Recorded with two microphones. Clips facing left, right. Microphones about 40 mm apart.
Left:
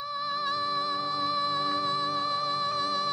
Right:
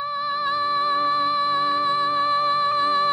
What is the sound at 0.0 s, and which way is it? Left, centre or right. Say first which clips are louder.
Music: right 7 dB; right.